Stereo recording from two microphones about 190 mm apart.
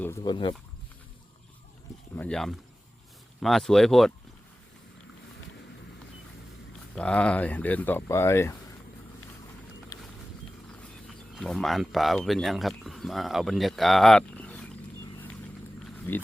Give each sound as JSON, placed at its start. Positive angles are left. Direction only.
{"t": 0.2, "sound": "speech", "side_deg": 25}
{"t": 2.1, "sound": "speech", "side_deg": 5}
{"t": 6.9, "sound": "speech", "side_deg": 5}
{"t": 9.9, "sound": "a sound", "side_deg": 20}
{"t": 11.3, "sound": "speech", "side_deg": 0}
{"t": 15.0, "sound": "vehicle", "side_deg": 10}
{"t": 16.1, "sound": "speech", "side_deg": 10}